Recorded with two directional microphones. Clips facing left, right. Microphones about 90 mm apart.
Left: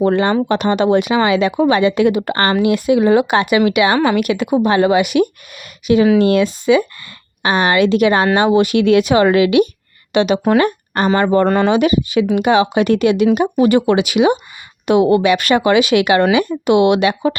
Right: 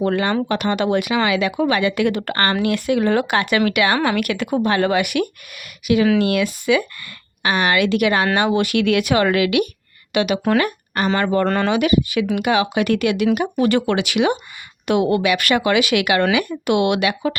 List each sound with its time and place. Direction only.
0.0 s speech: 25° left (ahead or behind)
11.4 s speech: 15° left (ahead or behind)
11.8 s speech: 25° left (ahead or behind)